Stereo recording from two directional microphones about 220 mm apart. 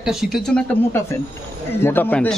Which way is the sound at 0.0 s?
Centre (ahead or behind).